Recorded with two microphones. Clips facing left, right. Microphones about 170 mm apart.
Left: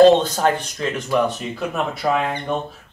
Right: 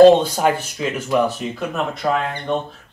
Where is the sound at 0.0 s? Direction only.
10° right (ahead or behind).